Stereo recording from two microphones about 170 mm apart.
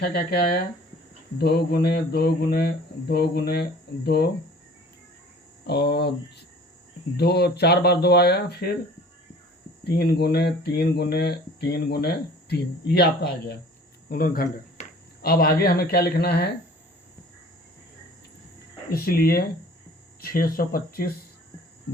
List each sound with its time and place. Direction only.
0.0 s speech: 70° left (ahead or behind)
5.6 s speech: 70° left (ahead or behind)
9.8 s speech: 70° left (ahead or behind)
14.1 s speech: 60° left (ahead or behind)
18.9 s speech: 65° left (ahead or behind)